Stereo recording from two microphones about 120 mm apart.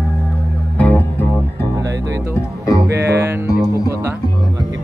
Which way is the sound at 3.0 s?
20° right (ahead or behind).